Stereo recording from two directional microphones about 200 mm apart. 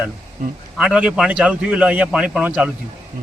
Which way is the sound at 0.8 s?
5° right (ahead or behind).